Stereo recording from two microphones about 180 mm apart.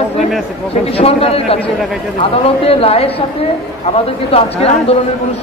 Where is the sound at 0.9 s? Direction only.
35° left (ahead or behind).